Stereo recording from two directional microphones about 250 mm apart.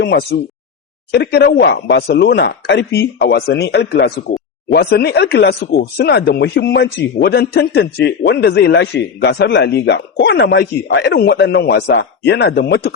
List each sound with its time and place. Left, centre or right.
0.0 s speech: left